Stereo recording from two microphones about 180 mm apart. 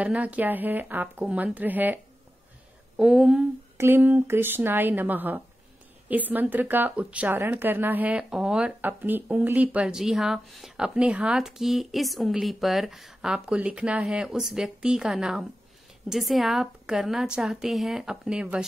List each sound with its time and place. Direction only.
0.0 s speech: 10° right (ahead or behind)
3.0 s speech: 5° right (ahead or behind)